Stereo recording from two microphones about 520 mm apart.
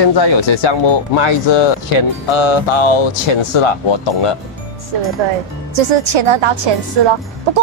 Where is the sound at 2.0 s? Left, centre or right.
Left.